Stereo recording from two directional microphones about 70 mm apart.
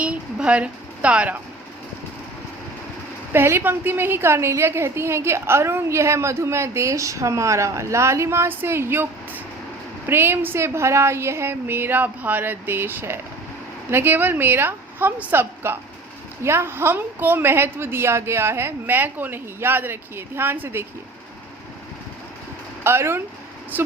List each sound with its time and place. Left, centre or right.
0.0 s a woman's voice: centre
3.3 s a woman's voice: right
10.1 s a woman's voice: right
22.8 s a woman's voice: right